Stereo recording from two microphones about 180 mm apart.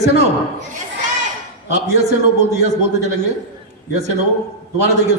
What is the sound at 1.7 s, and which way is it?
A man's voice, 40° right (ahead or behind).